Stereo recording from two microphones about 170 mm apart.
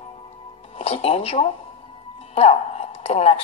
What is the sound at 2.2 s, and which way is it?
Music, 40° left (ahead or behind).